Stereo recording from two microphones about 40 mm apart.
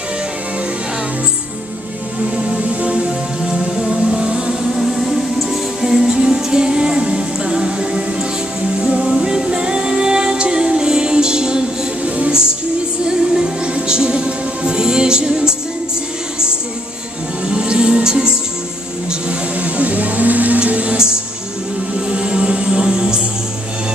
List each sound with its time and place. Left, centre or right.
2.7 s music: right
3.0 s music: centre
4.6 s music: centre
13.3 s music: centre
17.5 s music: right
19.6 s music: right
20.6 s music: right